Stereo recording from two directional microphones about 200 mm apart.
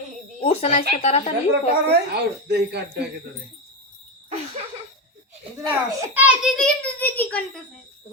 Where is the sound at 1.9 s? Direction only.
55° right (ahead or behind).